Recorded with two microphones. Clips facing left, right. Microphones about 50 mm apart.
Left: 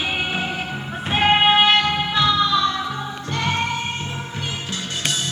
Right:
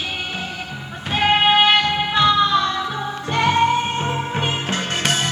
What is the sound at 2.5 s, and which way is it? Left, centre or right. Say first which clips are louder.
Music: right 1 dB; right.